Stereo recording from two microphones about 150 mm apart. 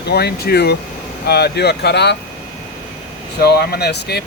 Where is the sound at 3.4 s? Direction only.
90° left.